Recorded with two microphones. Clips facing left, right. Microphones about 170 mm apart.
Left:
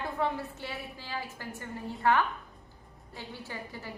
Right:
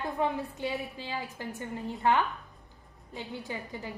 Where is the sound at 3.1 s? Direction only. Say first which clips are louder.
Right 4 dB; 20° right (ahead or behind).